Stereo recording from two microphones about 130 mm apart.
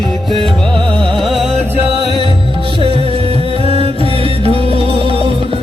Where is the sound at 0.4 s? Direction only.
5° left (ahead or behind).